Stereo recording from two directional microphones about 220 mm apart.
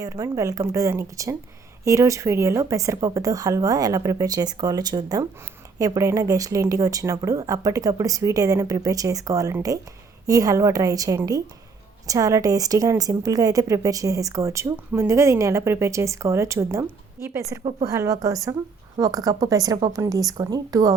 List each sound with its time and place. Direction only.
0.0 s a woman's voice: 15° right (ahead or behind)
17.6 s a woman's voice: 25° right (ahead or behind)
17.9 s a woman's voice: 15° right (ahead or behind)